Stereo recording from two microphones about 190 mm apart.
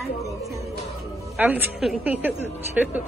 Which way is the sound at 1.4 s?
10° right (ahead or behind).